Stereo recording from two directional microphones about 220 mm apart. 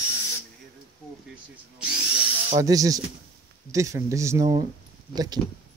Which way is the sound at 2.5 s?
15° right (ahead or behind).